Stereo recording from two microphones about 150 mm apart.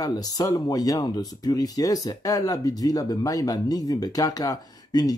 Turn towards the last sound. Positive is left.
turn(degrees=25)  # may be behind; listen again after turning